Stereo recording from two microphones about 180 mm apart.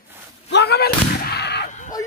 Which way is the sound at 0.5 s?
65° left (ahead or behind).